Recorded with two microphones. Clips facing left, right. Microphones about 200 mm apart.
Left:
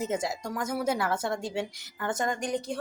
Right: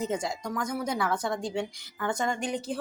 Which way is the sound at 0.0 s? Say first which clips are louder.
Even; 5° left (ahead or behind).